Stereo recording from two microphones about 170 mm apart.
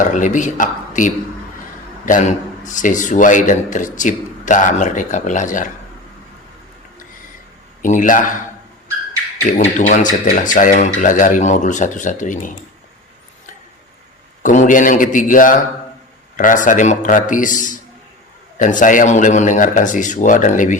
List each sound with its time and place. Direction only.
0.0 s a man's voice: 45° left (ahead or behind)
7.8 s a man's voice: 50° left (ahead or behind)
9.4 s a man's voice: 50° left (ahead or behind)
14.4 s a man's voice: 50° left (ahead or behind)